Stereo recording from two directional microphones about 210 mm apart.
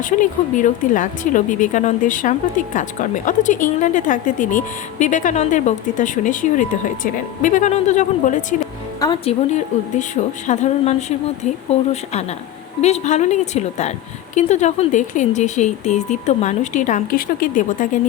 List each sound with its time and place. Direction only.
0.0 s speech: 35° left (ahead or behind)
9.0 s speech: 20° left (ahead or behind)
9.5 s speech: 35° left (ahead or behind)
12.8 s speech: 30° left (ahead or behind)